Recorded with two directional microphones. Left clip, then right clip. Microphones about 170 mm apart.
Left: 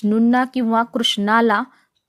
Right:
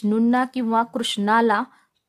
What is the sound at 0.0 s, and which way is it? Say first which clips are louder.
Speech: left 3 dB; 10° left (ahead or behind).